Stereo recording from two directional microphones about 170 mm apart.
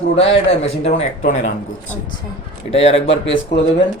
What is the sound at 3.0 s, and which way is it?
Speech, 90° left.